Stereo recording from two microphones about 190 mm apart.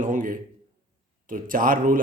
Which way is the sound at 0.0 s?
45° right (ahead or behind).